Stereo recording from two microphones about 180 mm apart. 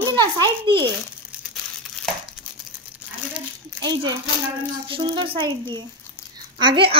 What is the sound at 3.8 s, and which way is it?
A woman's voice, 20° right (ahead or behind).